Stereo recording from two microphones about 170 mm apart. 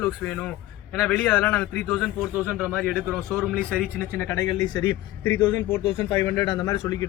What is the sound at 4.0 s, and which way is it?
Speech, 15° left (ahead or behind).